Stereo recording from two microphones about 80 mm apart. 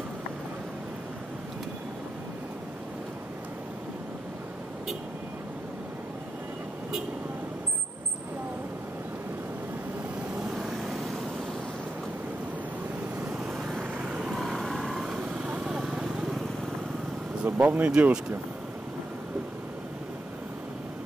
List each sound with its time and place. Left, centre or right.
10.6 s vehicle: centre
13.9 s vehicle: centre
17.5 s speech: right